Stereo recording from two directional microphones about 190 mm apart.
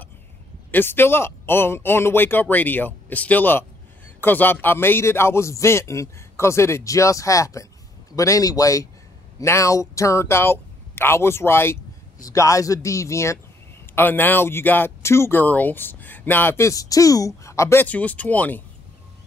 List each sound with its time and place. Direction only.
0.7 s a man's voice: 10° left (ahead or behind)